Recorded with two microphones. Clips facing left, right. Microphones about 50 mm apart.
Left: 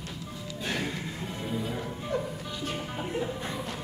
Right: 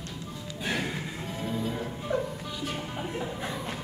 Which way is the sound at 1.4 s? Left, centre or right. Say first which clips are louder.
Right 2 dB; centre.